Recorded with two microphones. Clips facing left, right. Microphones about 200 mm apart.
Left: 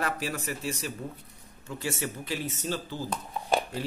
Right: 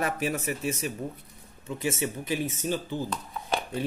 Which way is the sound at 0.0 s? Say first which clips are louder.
Right 3 dB; 20° right (ahead or behind).